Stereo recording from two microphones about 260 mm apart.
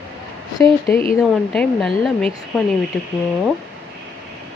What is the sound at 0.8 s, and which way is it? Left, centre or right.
Speech, left.